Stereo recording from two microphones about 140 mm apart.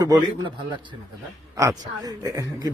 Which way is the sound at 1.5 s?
20° right (ahead or behind).